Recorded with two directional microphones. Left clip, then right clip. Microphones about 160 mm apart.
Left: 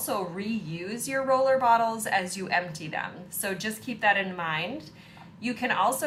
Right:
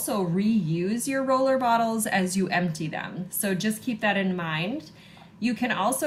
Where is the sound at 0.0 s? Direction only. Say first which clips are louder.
Right 3 dB; 25° left (ahead or behind).